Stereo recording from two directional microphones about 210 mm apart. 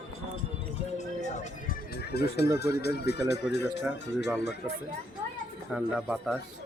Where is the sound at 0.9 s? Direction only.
35° left (ahead or behind).